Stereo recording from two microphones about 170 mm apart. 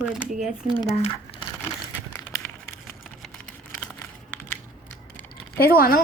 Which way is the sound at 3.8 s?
10° left (ahead or behind).